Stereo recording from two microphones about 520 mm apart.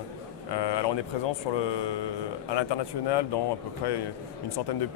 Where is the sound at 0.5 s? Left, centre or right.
Left.